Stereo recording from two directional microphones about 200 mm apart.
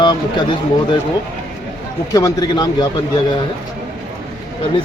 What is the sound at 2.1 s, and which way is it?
A man's voice, 20° left (ahead or behind).